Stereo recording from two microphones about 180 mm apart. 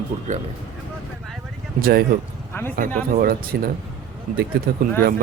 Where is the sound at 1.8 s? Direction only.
55° right (ahead or behind).